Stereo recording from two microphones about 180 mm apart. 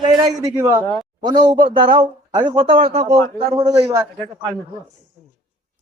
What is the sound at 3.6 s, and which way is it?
Speech, 20° right (ahead or behind).